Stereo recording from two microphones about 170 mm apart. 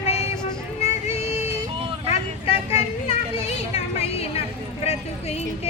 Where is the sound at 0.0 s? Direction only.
35° left (ahead or behind).